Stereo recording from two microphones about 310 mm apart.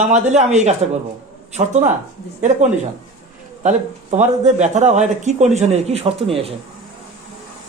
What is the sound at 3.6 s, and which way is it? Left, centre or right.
Speech, right.